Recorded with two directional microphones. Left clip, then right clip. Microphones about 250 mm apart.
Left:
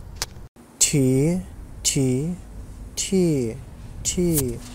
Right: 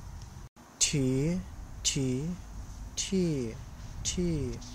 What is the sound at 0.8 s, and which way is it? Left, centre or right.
Speech, centre.